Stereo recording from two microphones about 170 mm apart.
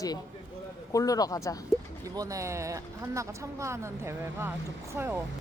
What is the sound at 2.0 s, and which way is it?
Speech, 20° right (ahead or behind).